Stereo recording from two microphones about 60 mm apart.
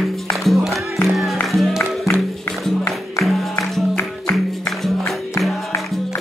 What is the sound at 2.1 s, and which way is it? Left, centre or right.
Music, left.